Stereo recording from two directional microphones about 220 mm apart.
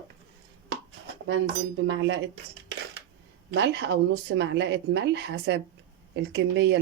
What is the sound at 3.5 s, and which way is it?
Speech, 50° right (ahead or behind).